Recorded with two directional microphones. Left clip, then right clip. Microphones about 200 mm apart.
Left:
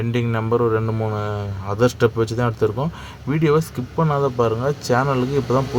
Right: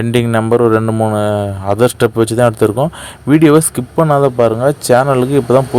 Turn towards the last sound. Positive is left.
turn(degrees=-35)  # may be behind; listen again after turning